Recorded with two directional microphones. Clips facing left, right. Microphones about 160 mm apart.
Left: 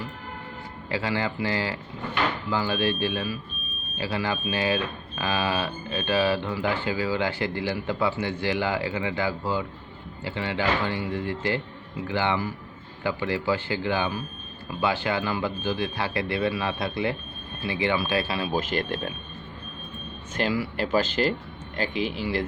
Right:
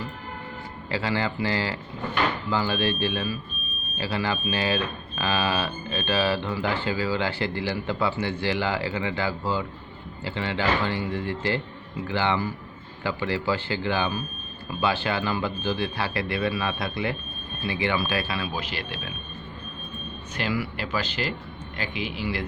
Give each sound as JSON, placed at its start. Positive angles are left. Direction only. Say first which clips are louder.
{"t": 0.9, "sound": "speech", "louder": "even", "side_deg": 15}
{"t": 18.5, "sound": "speech", "louder": "left 6 dB", "side_deg": 50}
{"t": 20.4, "sound": "speech", "louder": "left 3 dB", "side_deg": 40}